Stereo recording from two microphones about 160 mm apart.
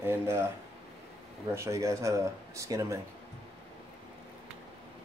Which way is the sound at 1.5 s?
20° right (ahead or behind).